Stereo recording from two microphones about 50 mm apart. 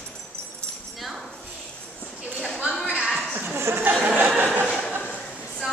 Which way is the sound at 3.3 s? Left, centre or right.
Right.